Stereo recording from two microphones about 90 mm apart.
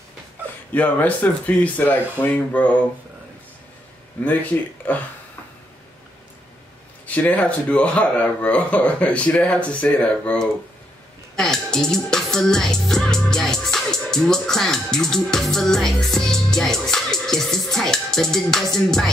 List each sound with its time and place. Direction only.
0.7 s speech: 15° left (ahead or behind)
4.2 s speech: 20° left (ahead or behind)
7.1 s speech: 15° left (ahead or behind)
11.3 s music: 5° left (ahead or behind)